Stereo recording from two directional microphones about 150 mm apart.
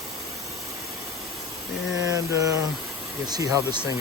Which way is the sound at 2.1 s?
20° right (ahead or behind).